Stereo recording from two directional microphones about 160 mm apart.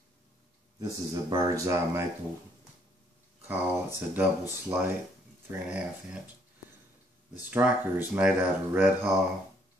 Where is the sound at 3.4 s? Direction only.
15° right (ahead or behind).